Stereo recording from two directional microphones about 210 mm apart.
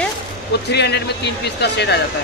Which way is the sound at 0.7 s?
55° left (ahead or behind).